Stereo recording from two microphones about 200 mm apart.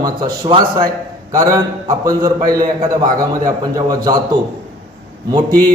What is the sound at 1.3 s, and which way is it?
A man's voice, 15° right (ahead or behind).